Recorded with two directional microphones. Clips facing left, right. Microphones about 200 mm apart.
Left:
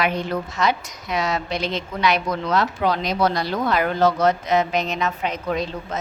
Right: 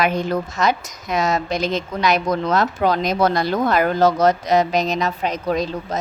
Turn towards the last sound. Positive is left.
turn(degrees=-40)  # may be behind; listen again after turning